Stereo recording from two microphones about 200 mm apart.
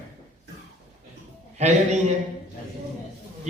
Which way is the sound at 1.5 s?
35° right (ahead or behind).